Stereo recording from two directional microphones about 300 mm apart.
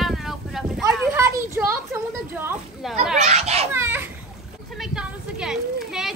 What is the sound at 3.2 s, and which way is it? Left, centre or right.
Children playing, right.